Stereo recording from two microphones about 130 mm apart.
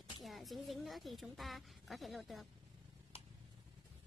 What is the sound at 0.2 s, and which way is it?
Speech, centre (ahead or behind).